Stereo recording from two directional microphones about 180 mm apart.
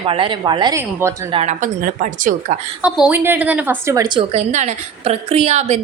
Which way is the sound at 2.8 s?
5° right (ahead or behind).